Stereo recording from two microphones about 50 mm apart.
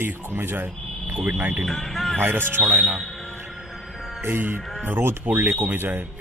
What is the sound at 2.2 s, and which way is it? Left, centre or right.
Speech, right.